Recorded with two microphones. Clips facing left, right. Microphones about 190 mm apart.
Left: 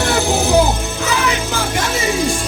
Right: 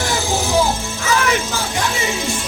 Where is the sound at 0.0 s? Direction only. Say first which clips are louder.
Left 4 dB; 65° left (ahead or behind).